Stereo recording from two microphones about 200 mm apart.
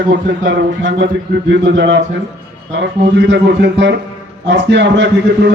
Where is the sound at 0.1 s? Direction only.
60° right (ahead or behind).